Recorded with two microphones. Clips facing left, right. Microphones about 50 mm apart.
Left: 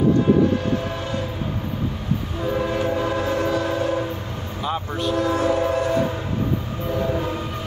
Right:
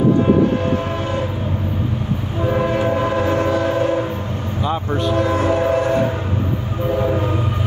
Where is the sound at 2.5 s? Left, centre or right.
Right.